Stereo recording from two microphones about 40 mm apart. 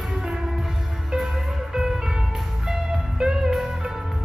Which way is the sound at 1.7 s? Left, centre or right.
Centre.